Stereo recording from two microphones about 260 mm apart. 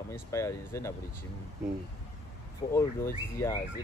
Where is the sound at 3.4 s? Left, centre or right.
Centre.